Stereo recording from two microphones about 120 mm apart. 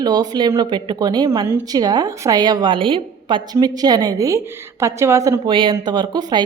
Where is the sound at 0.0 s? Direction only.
35° right (ahead or behind).